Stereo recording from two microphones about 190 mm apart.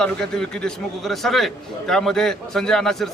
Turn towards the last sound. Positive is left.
turn(degrees=0)  # may be behind; listen again after turning